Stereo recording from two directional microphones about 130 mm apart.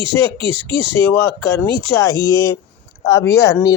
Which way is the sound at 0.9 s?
20° left (ahead or behind).